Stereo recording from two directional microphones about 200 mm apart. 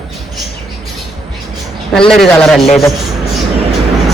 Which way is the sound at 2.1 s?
Centre (ahead or behind).